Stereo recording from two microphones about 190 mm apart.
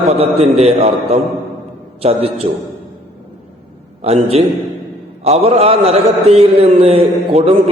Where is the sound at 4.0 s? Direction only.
35° right (ahead or behind).